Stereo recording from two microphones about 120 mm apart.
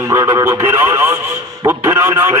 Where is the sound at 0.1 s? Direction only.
25° right (ahead or behind).